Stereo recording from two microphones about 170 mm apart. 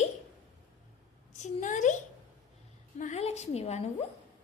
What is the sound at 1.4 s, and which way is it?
Speech, 45° left (ahead or behind).